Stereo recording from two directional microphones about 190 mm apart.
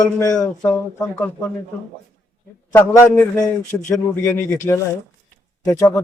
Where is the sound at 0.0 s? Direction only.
15° left (ahead or behind).